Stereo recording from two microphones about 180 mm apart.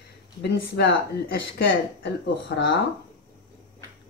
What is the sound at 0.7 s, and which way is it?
Speech, 65° left (ahead or behind).